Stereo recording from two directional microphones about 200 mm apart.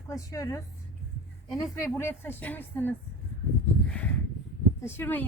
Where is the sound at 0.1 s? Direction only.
15° left (ahead or behind).